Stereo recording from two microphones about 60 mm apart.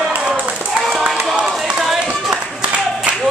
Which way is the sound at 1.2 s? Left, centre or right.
Centre.